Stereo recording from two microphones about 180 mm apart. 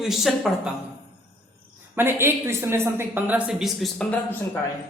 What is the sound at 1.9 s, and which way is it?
A woman's voice, 15° right (ahead or behind).